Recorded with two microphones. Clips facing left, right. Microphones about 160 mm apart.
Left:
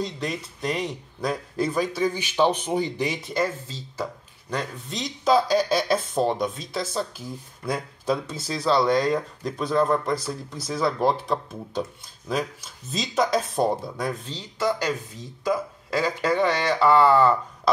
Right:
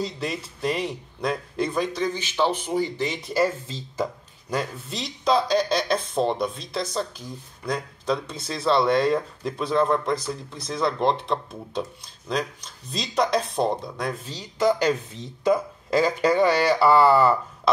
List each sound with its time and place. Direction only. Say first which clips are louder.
0.0 s speech: even; centre (ahead or behind); by 3.2 s 15° left (ahead or behind)
3.2 s speech: right 3 dB; 5° right (ahead or behind)
3.6 s speech: right 3 dB; 15° right (ahead or behind)